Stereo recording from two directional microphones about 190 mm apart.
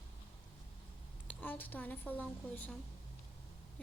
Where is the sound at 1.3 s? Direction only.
10° left (ahead or behind).